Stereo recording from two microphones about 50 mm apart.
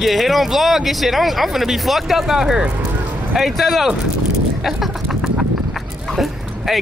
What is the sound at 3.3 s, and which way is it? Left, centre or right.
Speech, centre.